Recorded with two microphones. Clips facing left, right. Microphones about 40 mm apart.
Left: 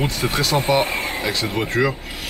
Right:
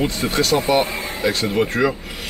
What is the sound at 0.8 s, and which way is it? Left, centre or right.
Speech, left.